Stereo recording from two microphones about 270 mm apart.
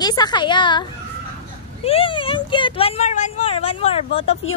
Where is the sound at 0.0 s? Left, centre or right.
Centre.